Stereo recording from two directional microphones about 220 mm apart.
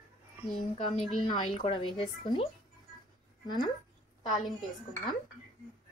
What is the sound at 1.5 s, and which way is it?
Speech, 25° left (ahead or behind).